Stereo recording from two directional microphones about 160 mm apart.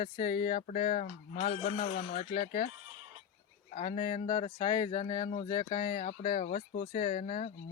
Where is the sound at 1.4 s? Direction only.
35° left (ahead or behind).